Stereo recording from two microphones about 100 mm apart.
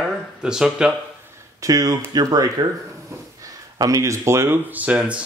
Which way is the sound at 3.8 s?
35° right (ahead or behind).